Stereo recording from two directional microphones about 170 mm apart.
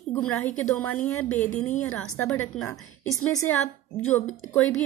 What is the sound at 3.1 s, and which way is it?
Speech, 20° left (ahead or behind).